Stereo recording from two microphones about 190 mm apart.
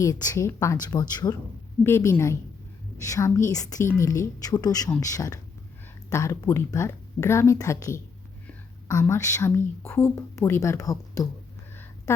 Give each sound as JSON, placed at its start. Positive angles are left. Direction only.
{"t": 0.0, "sound": "speech", "side_deg": 20}